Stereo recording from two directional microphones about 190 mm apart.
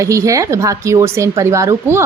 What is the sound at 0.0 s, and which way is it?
A woman's voice, 15° right (ahead or behind).